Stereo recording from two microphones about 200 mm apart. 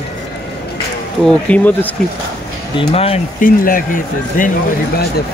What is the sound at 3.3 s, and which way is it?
Speech, 45° left (ahead or behind).